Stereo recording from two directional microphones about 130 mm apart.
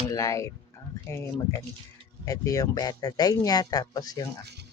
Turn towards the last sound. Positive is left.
turn(degrees=30)  # may be behind; listen again after turning